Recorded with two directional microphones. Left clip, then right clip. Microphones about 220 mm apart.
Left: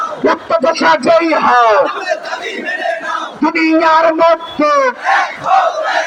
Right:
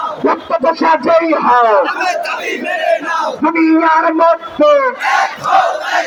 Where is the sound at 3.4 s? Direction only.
45° left (ahead or behind).